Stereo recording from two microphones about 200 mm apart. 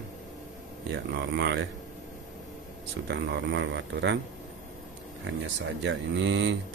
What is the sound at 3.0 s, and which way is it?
Speech, 60° right (ahead or behind).